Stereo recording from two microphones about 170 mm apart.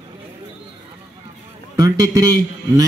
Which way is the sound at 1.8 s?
20° right (ahead or behind).